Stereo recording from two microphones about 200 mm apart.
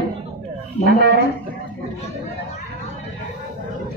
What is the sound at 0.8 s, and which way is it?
Speech, 50° right (ahead or behind).